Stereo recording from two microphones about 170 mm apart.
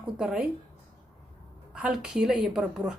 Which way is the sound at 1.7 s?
5° right (ahead or behind).